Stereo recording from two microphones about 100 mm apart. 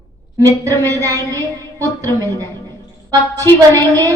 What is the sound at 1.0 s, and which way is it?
Speech, 35° right (ahead or behind).